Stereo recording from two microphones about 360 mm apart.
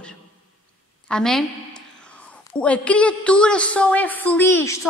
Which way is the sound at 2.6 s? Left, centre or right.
Centre.